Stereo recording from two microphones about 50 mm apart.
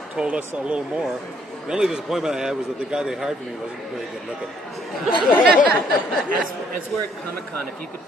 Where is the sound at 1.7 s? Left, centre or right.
Centre.